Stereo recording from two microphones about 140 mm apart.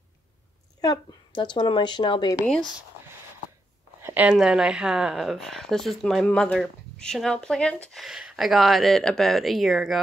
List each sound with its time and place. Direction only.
0.7 s a woman's voice: 30° left (ahead or behind)
2.4 s speech: 5° left (ahead or behind)
4.0 s speech: 10° right (ahead or behind)